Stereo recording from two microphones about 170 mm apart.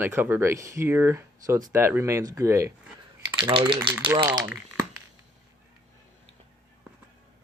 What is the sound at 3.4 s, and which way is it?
Speech, 30° right (ahead or behind).